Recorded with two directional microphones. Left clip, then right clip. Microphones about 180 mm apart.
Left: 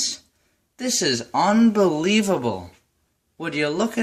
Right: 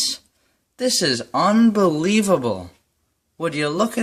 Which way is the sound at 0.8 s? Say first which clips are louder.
Right 3 dB; 50° right (ahead or behind).